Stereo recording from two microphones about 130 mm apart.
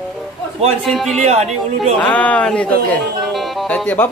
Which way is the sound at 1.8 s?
10° left (ahead or behind).